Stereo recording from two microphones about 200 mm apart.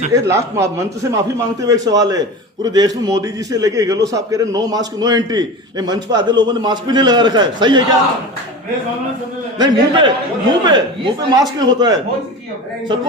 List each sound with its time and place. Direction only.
0.1 s a man's voice: 15° right (ahead or behind)
9.6 s a man's voice: 25° right (ahead or behind)